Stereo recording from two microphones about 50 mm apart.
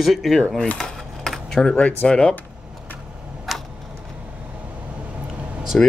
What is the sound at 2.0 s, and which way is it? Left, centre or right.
Speech, left.